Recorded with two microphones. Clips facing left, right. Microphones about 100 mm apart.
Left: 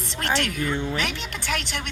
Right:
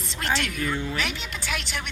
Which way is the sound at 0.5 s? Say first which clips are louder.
Left 2 dB; 25° left (ahead or behind).